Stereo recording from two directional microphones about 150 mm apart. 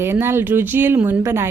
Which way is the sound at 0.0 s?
15° right (ahead or behind).